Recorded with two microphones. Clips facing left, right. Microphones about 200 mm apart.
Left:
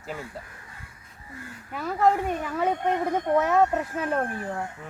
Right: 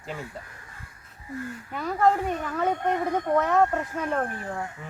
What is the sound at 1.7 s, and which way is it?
A woman's voice, 5° left (ahead or behind).